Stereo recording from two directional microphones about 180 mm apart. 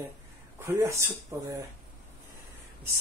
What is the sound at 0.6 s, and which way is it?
Speech, 15° right (ahead or behind).